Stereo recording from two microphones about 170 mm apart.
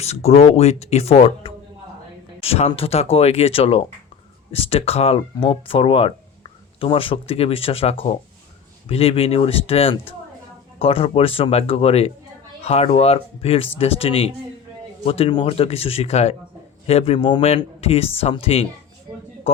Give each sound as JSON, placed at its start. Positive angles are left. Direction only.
{"t": 0.0, "sound": "speech", "side_deg": 40}
{"t": 19.1, "sound": "speech", "side_deg": -25}